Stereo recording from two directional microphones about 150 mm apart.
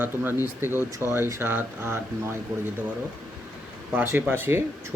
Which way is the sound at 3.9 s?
15° right (ahead or behind).